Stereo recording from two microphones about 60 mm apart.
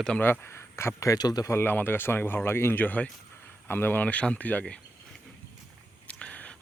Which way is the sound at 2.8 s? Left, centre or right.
Left.